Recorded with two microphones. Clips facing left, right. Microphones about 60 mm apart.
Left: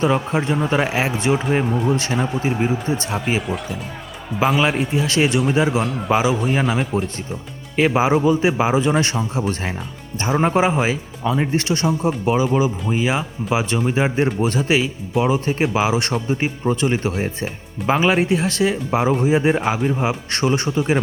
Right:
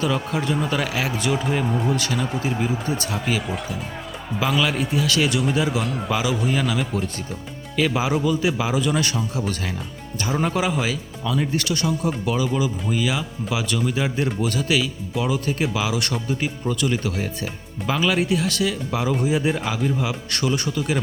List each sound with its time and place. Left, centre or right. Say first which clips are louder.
0.0 s speech: left 4 dB; left
3.4 s speech: left 3 dB; centre
4.8 s speech: left 3 dB; left
5.8 s speech: left 3 dB; centre
6.1 s speech: left 6 dB; left